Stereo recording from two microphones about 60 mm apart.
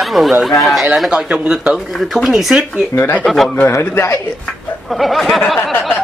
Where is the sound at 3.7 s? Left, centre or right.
Left.